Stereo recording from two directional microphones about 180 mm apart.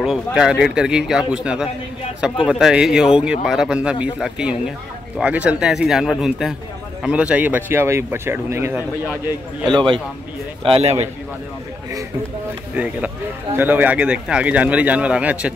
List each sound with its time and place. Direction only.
0.0 s a man's voice: centre (ahead or behind)
10.6 s a man's voice: 35° right (ahead or behind)
12.7 s a man's voice: 10° right (ahead or behind)